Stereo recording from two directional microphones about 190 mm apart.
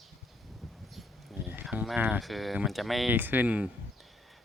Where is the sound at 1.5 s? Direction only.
10° right (ahead or behind).